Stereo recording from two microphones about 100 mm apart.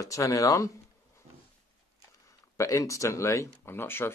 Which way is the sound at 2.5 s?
30° left (ahead or behind).